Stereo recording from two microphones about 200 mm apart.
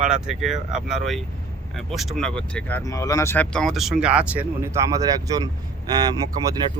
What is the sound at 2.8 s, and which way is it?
Speech, 15° left (ahead or behind).